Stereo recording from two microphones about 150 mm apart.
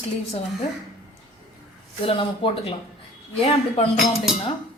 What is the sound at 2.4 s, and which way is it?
Speech, 35° left (ahead or behind).